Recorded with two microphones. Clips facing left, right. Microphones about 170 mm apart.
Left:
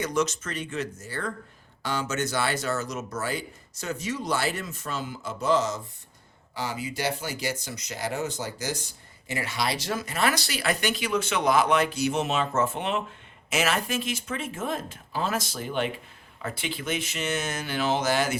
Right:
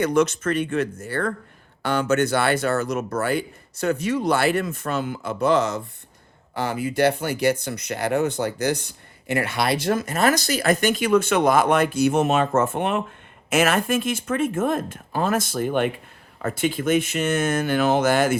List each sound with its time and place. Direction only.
0.0 s speech: 55° right (ahead or behind)